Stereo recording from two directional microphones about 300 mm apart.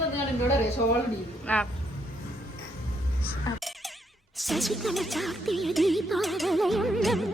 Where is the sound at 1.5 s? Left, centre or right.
Centre.